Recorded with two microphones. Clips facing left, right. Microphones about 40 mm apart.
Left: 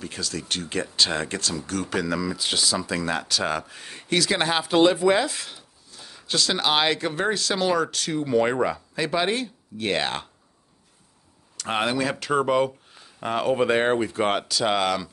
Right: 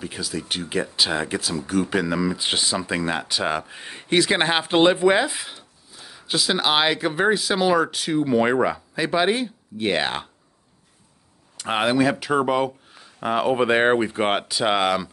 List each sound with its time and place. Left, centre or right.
0.0 s speech: centre
11.5 s speech: centre